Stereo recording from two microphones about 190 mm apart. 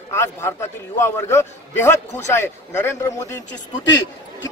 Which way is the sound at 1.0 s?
15° left (ahead or behind).